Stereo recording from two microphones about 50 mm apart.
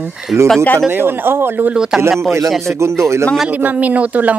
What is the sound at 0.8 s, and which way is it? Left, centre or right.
Speech, right.